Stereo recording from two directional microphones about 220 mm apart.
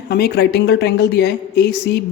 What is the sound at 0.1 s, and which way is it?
A woman's voice, 45° left (ahead or behind).